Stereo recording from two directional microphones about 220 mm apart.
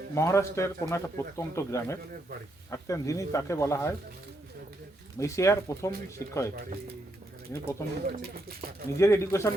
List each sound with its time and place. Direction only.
0.1 s a man's voice: 15° left (ahead or behind)
5.2 s a man's voice: 15° left (ahead or behind)
7.5 s a man's voice: 10° left (ahead or behind)
8.0 s speech: 45° right (ahead or behind)
9.0 s a man's voice: 15° left (ahead or behind)